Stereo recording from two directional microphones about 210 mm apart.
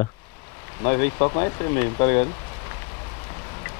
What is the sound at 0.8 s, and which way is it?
Speech, 25° left (ahead or behind).